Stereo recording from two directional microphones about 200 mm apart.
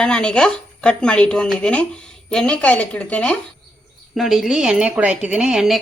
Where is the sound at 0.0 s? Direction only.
5° left (ahead or behind).